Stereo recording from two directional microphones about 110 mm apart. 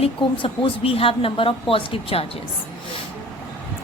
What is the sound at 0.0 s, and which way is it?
A woman's voice, 55° left (ahead or behind).